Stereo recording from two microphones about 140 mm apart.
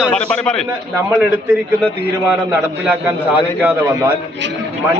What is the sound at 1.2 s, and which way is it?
A man's voice, 10° right (ahead or behind).